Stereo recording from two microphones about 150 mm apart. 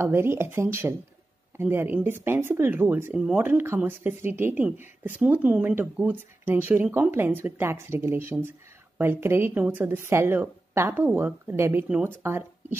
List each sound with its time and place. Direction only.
0.0 s speech: 15° right (ahead or behind)